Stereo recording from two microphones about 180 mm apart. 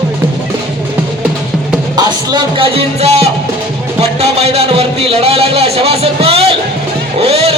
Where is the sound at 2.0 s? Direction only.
25° right (ahead or behind).